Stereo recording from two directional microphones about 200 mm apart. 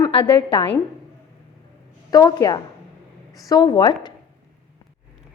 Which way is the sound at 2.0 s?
20° left (ahead or behind).